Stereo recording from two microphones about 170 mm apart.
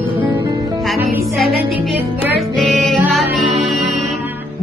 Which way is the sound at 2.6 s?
Centre (ahead or behind).